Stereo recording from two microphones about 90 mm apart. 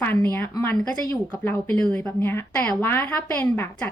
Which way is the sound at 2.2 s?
25° left (ahead or behind).